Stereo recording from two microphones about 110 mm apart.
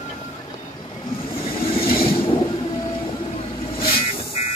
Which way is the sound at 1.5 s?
55° left (ahead or behind).